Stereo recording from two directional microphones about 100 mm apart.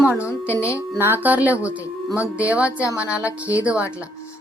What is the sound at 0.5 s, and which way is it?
Music, 30° left (ahead or behind).